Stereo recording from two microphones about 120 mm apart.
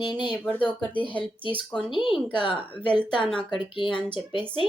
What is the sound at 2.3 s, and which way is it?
Speech, 45° left (ahead or behind).